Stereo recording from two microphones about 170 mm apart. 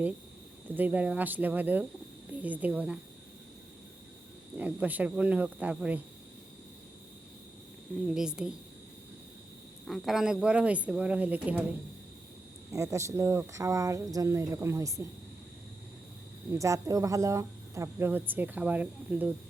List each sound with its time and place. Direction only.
0.7 s speech: 10° right (ahead or behind)
4.5 s speech: 10° right (ahead or behind)
8.0 s a woman's voice: 5° right (ahead or behind)
9.8 s speech: centre (ahead or behind)
12.7 s speech: 15° right (ahead or behind)
16.5 s speech: 15° right (ahead or behind)